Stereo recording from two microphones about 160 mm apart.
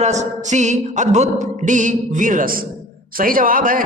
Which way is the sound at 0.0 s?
45° right (ahead or behind).